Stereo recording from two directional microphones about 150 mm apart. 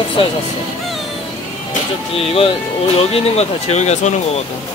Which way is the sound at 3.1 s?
45° left (ahead or behind).